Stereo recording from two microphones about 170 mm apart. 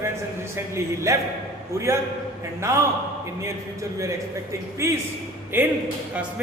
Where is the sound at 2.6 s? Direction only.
15° right (ahead or behind).